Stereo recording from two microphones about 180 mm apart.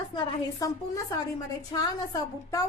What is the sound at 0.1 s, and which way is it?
Speech, 25° left (ahead or behind).